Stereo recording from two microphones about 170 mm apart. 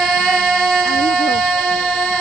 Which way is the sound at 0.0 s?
Centre (ahead or behind).